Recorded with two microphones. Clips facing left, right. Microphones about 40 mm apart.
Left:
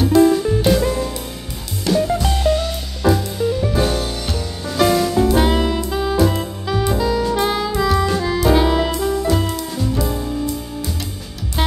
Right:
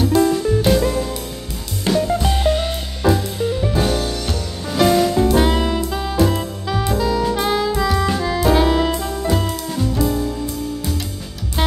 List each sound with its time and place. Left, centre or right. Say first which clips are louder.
0.0 s music: left 3 dB; centre
2.1 s music: even; centre
3.7 s music: even; centre